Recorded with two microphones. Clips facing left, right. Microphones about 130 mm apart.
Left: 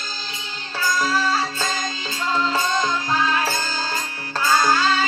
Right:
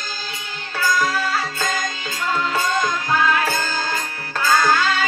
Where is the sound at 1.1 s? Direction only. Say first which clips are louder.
Left 1 dB; 30° left (ahead or behind).